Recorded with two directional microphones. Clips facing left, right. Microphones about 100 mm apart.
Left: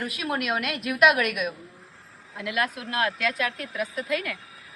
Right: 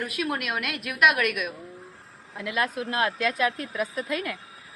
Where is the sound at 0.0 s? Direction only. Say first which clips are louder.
Even; centre (ahead or behind).